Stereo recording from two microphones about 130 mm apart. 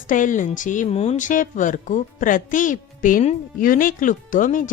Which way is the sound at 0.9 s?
55° left (ahead or behind).